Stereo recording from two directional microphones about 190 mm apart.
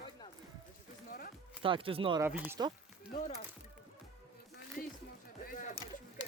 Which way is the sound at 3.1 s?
40° left (ahead or behind).